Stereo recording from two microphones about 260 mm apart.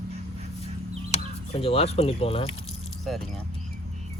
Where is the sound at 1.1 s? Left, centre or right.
Left.